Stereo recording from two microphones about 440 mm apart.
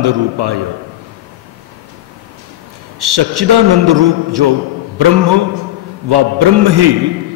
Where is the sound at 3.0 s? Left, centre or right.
Right.